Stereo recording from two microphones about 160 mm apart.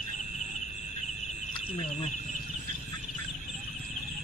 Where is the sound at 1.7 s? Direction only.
45° left (ahead or behind).